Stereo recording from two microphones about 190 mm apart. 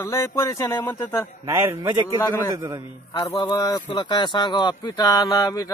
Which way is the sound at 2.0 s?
20° left (ahead or behind).